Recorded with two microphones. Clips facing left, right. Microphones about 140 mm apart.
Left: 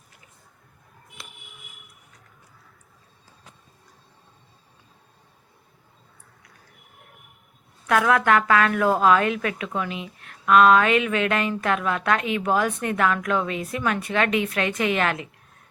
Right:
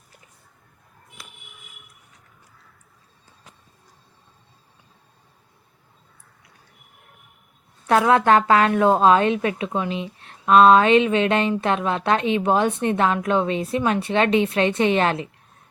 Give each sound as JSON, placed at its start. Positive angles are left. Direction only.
{"t": 7.9, "sound": "a woman's voice", "side_deg": -30}